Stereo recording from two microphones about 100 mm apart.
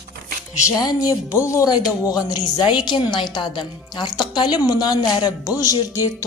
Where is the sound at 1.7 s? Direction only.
40° left (ahead or behind).